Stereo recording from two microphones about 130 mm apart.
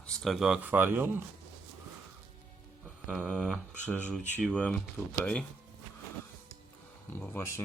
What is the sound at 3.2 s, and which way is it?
Speech, 5° left (ahead or behind).